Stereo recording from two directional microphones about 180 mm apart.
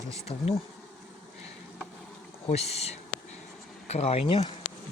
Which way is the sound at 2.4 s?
35° left (ahead or behind).